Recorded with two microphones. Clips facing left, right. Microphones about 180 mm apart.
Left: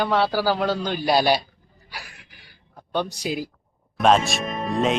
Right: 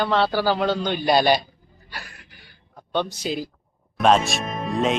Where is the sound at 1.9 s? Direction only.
5° left (ahead or behind).